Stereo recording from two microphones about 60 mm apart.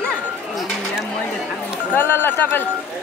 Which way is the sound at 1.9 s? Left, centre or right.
Left.